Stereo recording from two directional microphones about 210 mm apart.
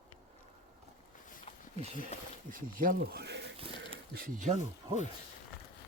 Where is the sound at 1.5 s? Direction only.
30° left (ahead or behind).